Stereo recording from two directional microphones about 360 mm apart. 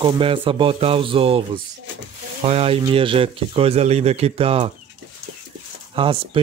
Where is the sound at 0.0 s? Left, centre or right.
Centre.